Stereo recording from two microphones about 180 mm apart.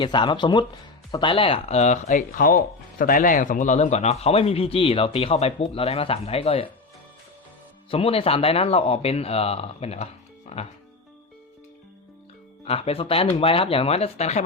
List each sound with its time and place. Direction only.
0.0 s speech: 25° left (ahead or behind)
7.9 s speech: 30° left (ahead or behind)
12.6 s speech: 35° left (ahead or behind)